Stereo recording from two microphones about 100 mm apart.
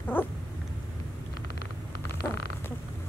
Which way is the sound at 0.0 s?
20° left (ahead or behind).